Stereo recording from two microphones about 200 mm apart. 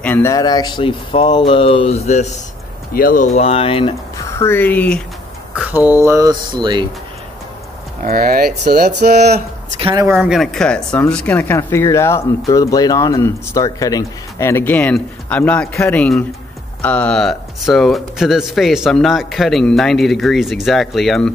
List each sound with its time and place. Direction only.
0.0 s speech: 10° left (ahead or behind); by 2.3 s 35° left (ahead or behind)
2.9 s speech: 45° left (ahead or behind); by 4.3 s 25° left (ahead or behind)
4.3 s speech: 10° left (ahead or behind)
5.5 s speech: 10° right (ahead or behind)
8.0 s a sound: 45° right (ahead or behind)
9.3 s speech: 25° right (ahead or behind)
10.1 s speech: centre (ahead or behind)